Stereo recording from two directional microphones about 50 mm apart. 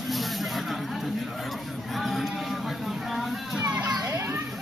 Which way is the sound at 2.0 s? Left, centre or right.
Centre.